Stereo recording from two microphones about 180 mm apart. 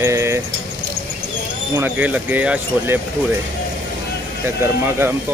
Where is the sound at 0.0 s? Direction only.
15° right (ahead or behind).